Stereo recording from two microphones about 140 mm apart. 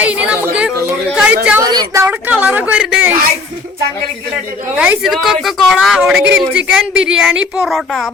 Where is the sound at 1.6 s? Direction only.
30° right (ahead or behind).